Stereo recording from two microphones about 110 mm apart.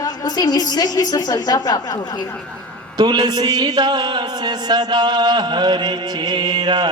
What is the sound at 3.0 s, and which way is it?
A man's voice, 40° right (ahead or behind).